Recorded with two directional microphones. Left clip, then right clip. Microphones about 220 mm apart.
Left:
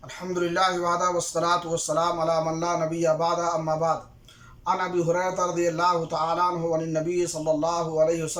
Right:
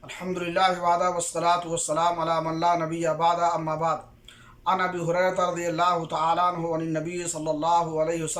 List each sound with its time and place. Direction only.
0.5 s a man's voice: 20° right (ahead or behind)
1.9 s a man's voice: 5° left (ahead or behind)